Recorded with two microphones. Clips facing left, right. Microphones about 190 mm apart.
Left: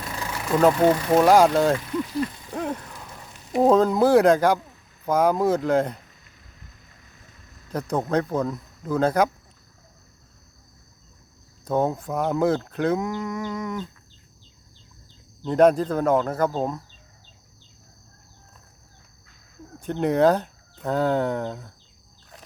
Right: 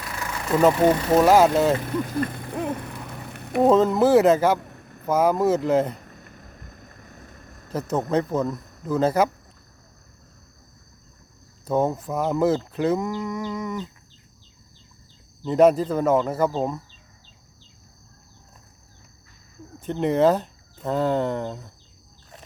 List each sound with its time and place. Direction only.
0.1 s vehicle: 15° left (ahead or behind)
0.4 s speech: 5° right (ahead or behind)
1.8 s a sound: 55° right (ahead or behind)
3.7 s speech: centre (ahead or behind)
4.6 s a sound: 60° right (ahead or behind)
5.0 s speech: 5° right (ahead or behind)
6.0 s a sound: 55° right (ahead or behind)
7.7 s speech: 5° right (ahead or behind)
11.6 s speech: 5° right (ahead or behind)
15.4 s speech: 5° right (ahead or behind)
19.8 s speech: centre (ahead or behind)